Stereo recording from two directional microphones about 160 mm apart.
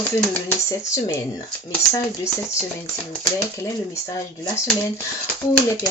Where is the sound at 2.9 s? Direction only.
15° left (ahead or behind).